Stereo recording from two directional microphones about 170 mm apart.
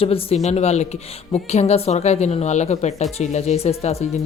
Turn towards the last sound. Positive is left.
turn(degrees=40)  # may be behind; listen again after turning